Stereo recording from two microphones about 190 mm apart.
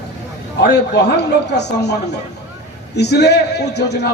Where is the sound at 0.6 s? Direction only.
60° left (ahead or behind).